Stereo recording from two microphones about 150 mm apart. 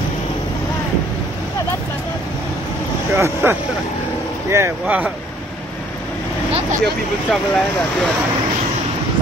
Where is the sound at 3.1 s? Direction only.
15° right (ahead or behind).